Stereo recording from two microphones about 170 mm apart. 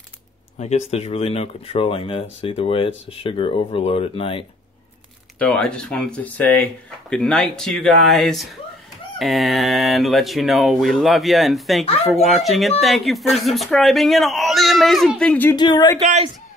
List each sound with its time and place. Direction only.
0.6 s speech: 40° left (ahead or behind)
5.4 s speech: 5° left (ahead or behind)
15.5 s speech: 25° left (ahead or behind)
16.0 s speech: 40° right (ahead or behind)